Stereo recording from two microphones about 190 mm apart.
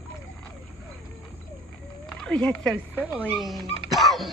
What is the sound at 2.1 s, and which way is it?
Speech, 5° left (ahead or behind).